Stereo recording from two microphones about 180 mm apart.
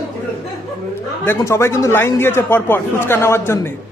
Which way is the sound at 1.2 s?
15° left (ahead or behind).